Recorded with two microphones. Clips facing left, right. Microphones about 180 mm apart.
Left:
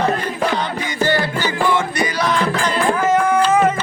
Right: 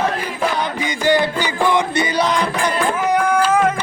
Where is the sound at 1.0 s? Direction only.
15° right (ahead or behind).